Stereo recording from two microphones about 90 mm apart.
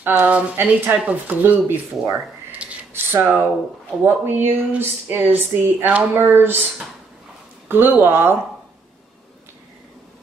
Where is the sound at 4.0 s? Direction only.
25° right (ahead or behind).